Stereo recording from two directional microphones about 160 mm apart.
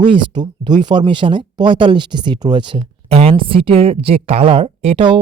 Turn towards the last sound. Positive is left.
turn(degrees=-35)  # may be behind; listen again after turning